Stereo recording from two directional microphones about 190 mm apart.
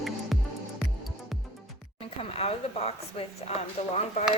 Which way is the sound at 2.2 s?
30° left (ahead or behind).